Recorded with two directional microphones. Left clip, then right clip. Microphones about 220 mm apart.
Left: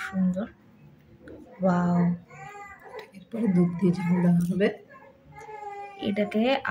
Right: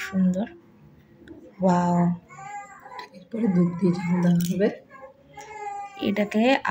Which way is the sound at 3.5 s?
30° left (ahead or behind).